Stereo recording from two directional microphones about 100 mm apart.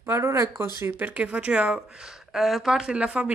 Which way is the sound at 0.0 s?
25° right (ahead or behind).